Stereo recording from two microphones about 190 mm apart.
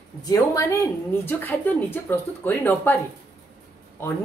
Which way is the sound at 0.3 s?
15° left (ahead or behind).